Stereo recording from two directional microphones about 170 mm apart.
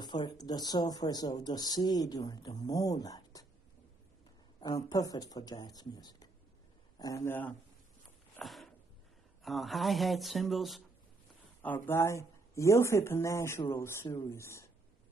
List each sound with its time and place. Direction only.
0.0 s speech: 25° left (ahead or behind)
4.6 s speech: 25° left (ahead or behind)
8.4 s a sound: centre (ahead or behind)
9.4 s speech: centre (ahead or behind)
11.6 s speech: 10° left (ahead or behind)